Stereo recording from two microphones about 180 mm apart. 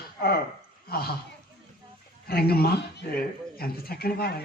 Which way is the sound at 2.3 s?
60° left (ahead or behind).